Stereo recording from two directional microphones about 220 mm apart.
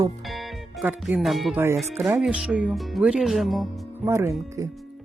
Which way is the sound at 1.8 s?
Centre (ahead or behind).